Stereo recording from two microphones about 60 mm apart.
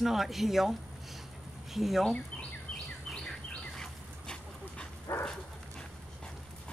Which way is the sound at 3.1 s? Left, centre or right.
Centre.